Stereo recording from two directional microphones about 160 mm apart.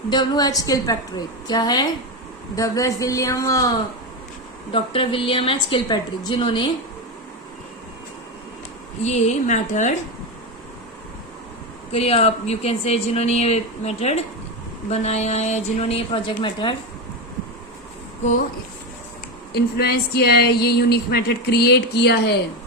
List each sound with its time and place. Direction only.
0.1 s a woman's voice: 25° left (ahead or behind)
4.7 s speech: 35° left (ahead or behind)
9.0 s a woman's voice: 45° left (ahead or behind)
11.9 s a woman's voice: 40° left (ahead or behind)
19.7 s a sound: 80° left